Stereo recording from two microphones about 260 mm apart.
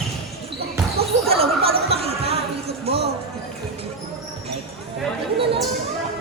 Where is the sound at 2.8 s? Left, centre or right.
Right.